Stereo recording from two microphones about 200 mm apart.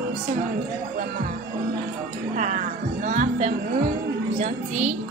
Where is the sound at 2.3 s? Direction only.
40° right (ahead or behind).